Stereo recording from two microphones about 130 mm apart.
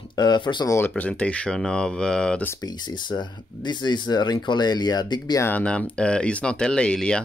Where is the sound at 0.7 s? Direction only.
15° left (ahead or behind).